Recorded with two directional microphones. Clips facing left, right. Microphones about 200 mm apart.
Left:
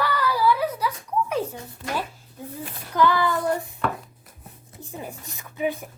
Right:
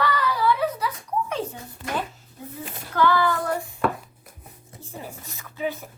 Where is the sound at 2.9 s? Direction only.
20° left (ahead or behind).